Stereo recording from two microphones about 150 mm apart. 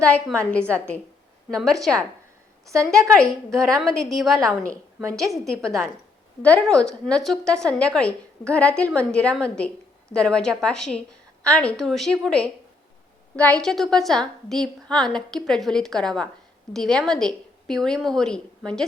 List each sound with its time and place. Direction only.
0.0 s a woman's voice: 5° left (ahead or behind)
2.6 s a woman's voice: 20° right (ahead or behind)
3.2 s a woman's voice: 5° left (ahead or behind)